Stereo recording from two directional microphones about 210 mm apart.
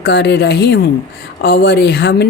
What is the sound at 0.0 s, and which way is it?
Speech, 55° left (ahead or behind).